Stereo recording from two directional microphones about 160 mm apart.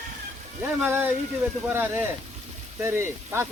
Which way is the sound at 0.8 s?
15° right (ahead or behind).